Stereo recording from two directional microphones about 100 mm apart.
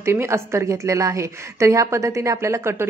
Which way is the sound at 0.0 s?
25° right (ahead or behind).